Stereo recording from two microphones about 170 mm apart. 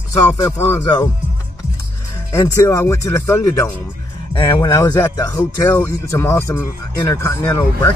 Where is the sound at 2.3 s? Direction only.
20° left (ahead or behind).